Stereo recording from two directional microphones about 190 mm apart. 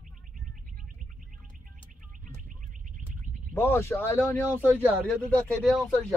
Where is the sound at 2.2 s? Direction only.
45° right (ahead or behind).